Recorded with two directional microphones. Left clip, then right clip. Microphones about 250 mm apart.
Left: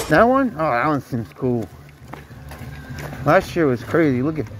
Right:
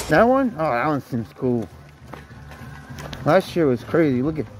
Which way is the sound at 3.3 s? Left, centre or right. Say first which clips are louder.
Left 1 dB; right.